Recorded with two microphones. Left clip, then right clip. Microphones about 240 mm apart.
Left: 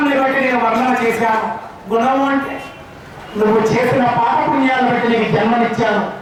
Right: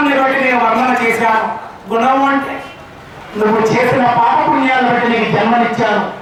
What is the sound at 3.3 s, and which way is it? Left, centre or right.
A man's voice, centre.